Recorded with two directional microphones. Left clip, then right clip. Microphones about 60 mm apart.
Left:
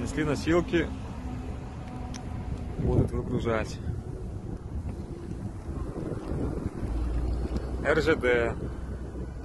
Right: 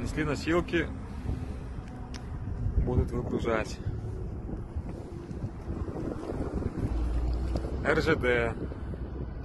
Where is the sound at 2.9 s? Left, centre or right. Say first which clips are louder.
Left 3 dB; left.